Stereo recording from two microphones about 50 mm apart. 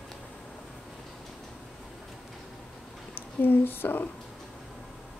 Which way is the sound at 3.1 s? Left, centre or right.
Left.